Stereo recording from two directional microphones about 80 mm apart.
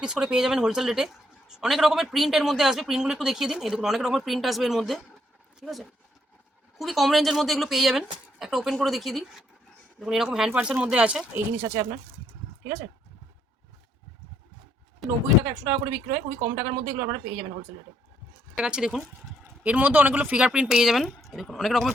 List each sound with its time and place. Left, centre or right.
0.0 s a woman's voice: centre; by 11.9 s right
15.0 s speech: centre
15.4 s a woman's voice: right
18.5 s speech: centre
19.6 s speech: centre